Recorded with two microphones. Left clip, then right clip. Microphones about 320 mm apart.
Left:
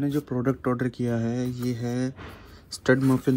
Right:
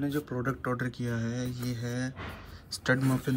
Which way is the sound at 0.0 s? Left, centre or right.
Centre.